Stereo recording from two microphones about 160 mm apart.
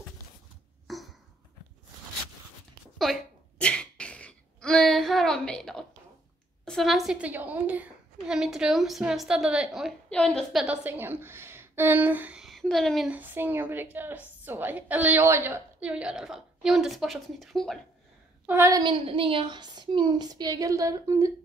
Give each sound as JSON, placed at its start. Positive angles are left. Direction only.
{"t": 0.8, "sound": "a sound", "side_deg": 0}
{"t": 3.0, "sound": "sneeze", "side_deg": 5}
{"t": 6.6, "sound": "a woman's voice", "side_deg": 5}
{"t": 18.5, "sound": "a woman's voice", "side_deg": -15}
{"t": 18.8, "sound": "a woman's voice", "side_deg": -30}